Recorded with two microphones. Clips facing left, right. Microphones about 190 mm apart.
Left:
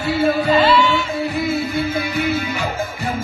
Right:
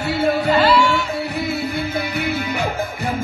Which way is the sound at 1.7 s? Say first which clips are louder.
Left 2 dB; 60° right (ahead or behind).